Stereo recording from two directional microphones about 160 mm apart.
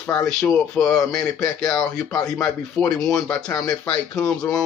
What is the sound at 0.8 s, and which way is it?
Speech, 5° left (ahead or behind).